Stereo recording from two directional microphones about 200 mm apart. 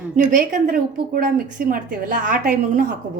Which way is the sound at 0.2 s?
40° right (ahead or behind).